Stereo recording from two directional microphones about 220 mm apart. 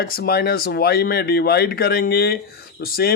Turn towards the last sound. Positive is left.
turn(degrees=45)  # may be behind; listen again after turning